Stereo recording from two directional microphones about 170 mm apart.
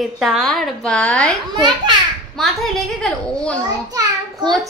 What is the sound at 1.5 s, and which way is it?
Speech, 25° right (ahead or behind).